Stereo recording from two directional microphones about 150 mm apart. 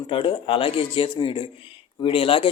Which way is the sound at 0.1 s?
35° left (ahead or behind).